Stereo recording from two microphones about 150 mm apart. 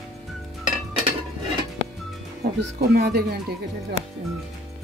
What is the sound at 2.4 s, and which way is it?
Speech, 90° right.